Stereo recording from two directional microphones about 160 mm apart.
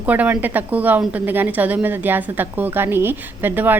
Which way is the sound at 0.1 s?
10° right (ahead or behind).